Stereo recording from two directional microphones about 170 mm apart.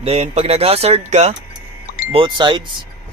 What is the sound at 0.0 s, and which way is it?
Speech, 35° right (ahead or behind).